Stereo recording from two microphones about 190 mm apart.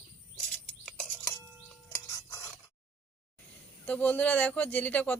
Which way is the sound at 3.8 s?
10° left (ahead or behind).